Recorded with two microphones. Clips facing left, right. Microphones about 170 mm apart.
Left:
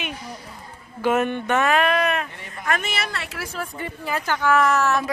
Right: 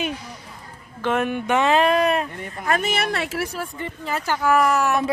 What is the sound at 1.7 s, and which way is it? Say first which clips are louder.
A woman's voice: right 3 dB; 30° right (ahead or behind).